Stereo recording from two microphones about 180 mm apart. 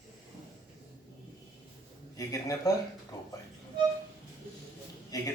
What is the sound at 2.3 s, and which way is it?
Speech, 20° left (ahead or behind).